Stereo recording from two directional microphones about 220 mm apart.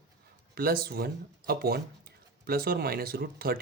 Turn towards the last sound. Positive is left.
turn(degrees=-45)  # may be behind; listen again after turning